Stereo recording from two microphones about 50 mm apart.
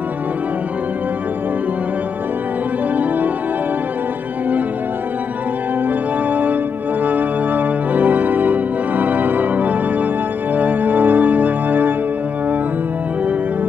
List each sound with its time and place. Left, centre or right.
6.3 s organ: right
10.5 s music: right